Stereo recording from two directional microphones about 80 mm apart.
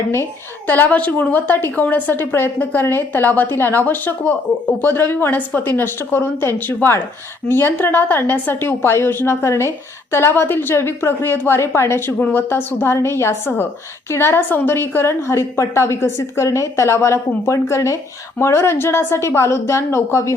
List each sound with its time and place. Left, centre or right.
0.7 s a woman's voice: left